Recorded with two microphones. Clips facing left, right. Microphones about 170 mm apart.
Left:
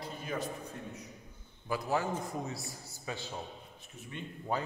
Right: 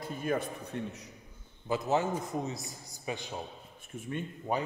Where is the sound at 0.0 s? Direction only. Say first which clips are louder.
Right 5 dB; 50° right (ahead or behind).